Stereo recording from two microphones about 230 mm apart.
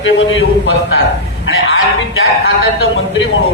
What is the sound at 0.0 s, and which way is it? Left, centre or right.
Speech, left.